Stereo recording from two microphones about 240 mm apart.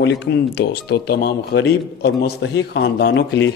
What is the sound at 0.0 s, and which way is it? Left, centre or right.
Speech, left.